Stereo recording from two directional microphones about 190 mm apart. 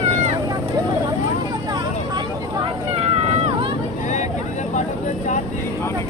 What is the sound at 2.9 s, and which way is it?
Vehicle, 35° right (ahead or behind).